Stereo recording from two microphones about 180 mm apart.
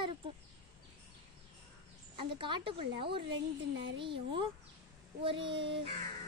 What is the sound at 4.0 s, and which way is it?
A child's voice, 30° right (ahead or behind).